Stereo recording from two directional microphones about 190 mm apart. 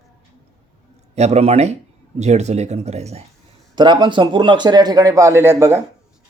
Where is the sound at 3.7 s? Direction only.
25° right (ahead or behind).